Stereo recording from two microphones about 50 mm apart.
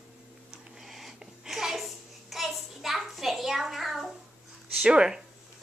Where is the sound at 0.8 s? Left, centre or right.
Centre.